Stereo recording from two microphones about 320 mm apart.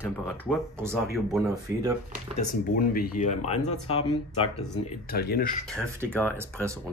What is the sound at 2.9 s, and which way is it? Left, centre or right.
Speech, left.